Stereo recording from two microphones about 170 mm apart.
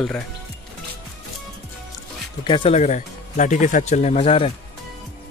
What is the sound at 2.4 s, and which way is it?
Speech, 30° left (ahead or behind).